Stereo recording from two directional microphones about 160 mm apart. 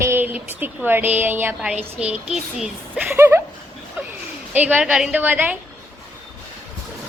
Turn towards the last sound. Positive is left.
turn(degrees=-10)  # may be behind; listen again after turning